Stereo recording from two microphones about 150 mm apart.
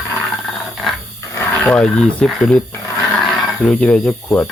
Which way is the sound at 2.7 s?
15° left (ahead or behind).